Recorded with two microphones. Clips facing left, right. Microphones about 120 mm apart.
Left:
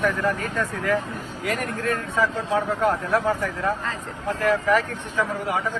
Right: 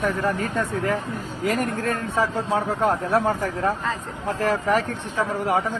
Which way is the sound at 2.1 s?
30° right (ahead or behind).